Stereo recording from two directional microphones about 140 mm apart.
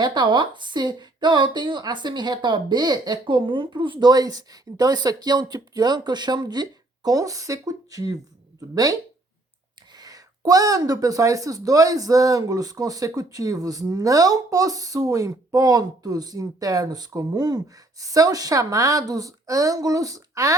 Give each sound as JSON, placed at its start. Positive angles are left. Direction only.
{"t": 0.0, "sound": "a woman's voice", "side_deg": -30}
{"t": 10.0, "sound": "speech", "side_deg": -25}